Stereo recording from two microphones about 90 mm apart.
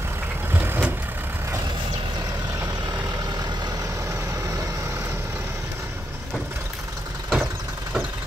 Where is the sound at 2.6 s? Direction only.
45° right (ahead or behind).